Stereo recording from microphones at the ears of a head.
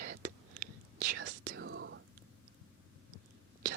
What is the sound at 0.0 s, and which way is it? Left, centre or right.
Whispering, right.